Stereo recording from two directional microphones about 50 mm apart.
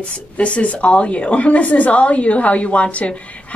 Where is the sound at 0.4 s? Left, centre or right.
Left.